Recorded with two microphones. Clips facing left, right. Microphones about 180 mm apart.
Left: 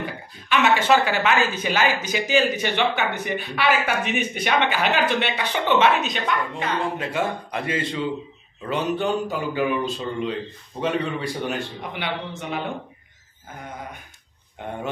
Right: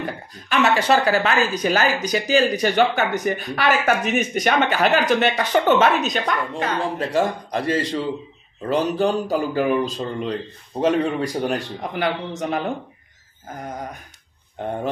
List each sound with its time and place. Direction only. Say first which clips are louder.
0.5 s speech: right 1 dB; 35° right (ahead or behind)